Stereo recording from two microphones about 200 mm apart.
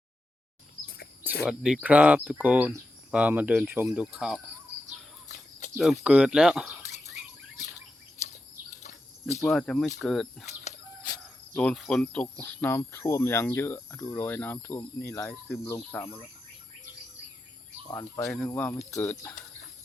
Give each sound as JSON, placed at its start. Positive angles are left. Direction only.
{"t": 1.5, "sound": "speech", "side_deg": -5}
{"t": 5.3, "sound": "a sound", "side_deg": 50}
{"t": 5.7, "sound": "speech", "side_deg": 0}
{"t": 8.8, "sound": "bird", "side_deg": 35}
{"t": 9.4, "sound": "speech", "side_deg": 0}
{"t": 11.5, "sound": "speech", "side_deg": 0}
{"t": 18.3, "sound": "speech", "side_deg": 10}